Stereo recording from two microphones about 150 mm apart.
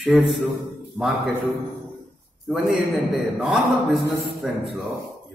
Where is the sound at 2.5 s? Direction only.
Centre (ahead or behind).